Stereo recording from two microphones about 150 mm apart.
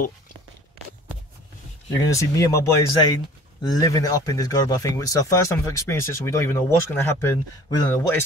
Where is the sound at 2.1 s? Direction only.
20° left (ahead or behind).